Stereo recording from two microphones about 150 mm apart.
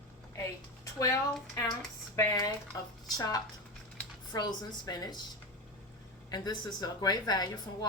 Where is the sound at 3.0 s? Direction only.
25° left (ahead or behind).